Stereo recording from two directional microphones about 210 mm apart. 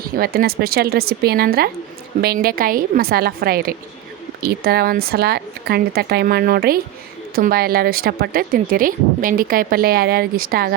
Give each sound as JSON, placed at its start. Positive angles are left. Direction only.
{"t": 0.0, "sound": "speech", "side_deg": -45}